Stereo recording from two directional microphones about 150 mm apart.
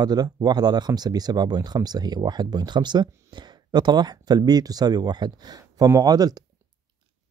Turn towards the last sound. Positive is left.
turn(degrees=-25)  # may be behind; listen again after turning